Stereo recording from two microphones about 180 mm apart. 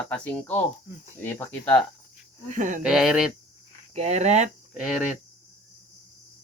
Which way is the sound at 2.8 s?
Centre (ahead or behind).